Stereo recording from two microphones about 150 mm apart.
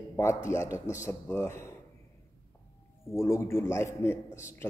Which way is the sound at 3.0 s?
20° left (ahead or behind).